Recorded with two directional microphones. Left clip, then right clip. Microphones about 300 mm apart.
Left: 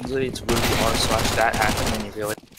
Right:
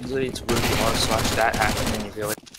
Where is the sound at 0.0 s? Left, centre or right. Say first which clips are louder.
Left 1 dB; centre.